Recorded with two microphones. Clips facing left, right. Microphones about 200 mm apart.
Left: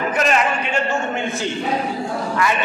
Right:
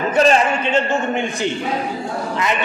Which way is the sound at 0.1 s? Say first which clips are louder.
Right 7 dB; 30° right (ahead or behind).